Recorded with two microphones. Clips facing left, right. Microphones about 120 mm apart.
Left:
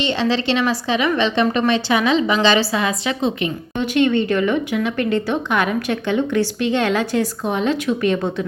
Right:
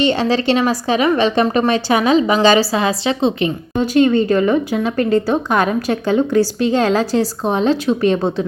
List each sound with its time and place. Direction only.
0.0 s a woman's voice: 45° right (ahead or behind)